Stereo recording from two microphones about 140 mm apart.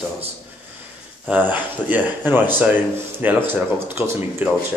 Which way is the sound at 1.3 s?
15° right (ahead or behind).